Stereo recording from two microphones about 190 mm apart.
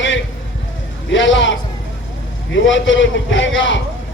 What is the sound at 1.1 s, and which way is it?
A man's voice, 75° left (ahead or behind).